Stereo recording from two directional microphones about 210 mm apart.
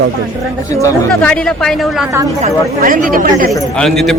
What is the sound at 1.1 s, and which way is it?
Speech, 5° left (ahead or behind).